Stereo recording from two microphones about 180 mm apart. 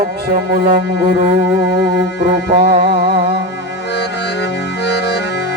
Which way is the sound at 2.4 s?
60° right (ahead or behind).